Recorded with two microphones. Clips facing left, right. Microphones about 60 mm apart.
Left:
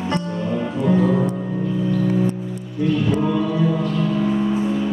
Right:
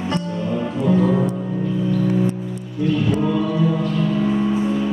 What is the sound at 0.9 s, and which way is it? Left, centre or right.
Music, centre.